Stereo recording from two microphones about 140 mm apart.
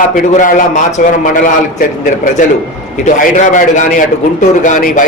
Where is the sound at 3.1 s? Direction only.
65° left (ahead or behind).